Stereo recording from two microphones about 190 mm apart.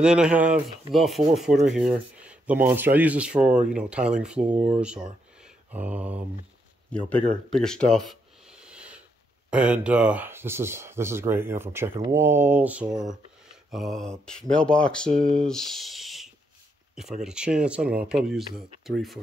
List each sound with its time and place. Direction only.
0.0 s speech: 5° right (ahead or behind)
5.4 s mantra: 10° right (ahead or behind)
6.9 s speech: 5° left (ahead or behind)
7.4 s a sound: 5° left (ahead or behind)
9.5 s speech: 5° right (ahead or behind)
12.8 s speech: 20° right (ahead or behind)
13.7 s speech: centre (ahead or behind)